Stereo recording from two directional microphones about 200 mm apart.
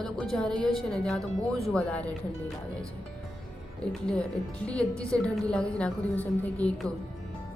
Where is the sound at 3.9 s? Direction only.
5° left (ahead or behind).